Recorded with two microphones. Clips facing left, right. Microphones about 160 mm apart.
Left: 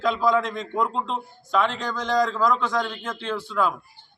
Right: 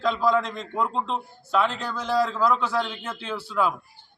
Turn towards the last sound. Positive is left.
turn(degrees=-10)  # may be behind; listen again after turning